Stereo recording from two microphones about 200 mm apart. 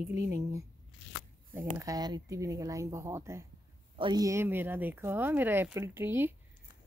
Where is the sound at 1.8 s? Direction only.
20° right (ahead or behind).